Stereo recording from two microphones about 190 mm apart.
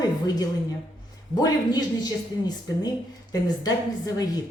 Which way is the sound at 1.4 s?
20° left (ahead or behind).